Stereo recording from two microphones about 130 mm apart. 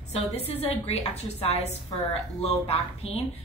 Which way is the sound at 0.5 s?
50° left (ahead or behind).